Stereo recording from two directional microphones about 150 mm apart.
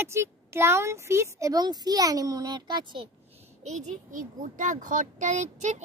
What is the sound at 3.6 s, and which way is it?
Speech, 55° right (ahead or behind).